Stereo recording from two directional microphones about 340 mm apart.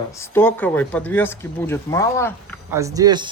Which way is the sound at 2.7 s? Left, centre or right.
Centre.